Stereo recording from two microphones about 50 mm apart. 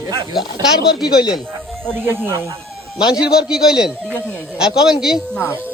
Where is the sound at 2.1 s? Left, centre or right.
Right.